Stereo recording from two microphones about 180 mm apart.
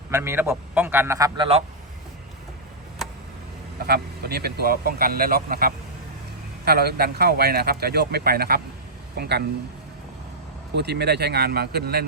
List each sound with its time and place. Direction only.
0.1 s a man's voice: 15° right (ahead or behind)
3.8 s a man's voice: 60° right (ahead or behind)
10.8 s speech: 65° right (ahead or behind)